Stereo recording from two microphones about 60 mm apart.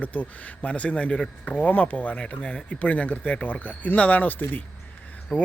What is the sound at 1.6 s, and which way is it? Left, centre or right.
Speech, left.